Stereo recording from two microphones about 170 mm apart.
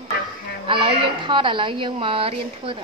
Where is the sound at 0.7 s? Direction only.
30° right (ahead or behind).